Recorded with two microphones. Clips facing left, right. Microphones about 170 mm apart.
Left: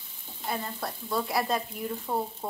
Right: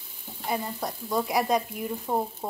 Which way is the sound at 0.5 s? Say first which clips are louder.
Right 3 dB; 15° right (ahead or behind).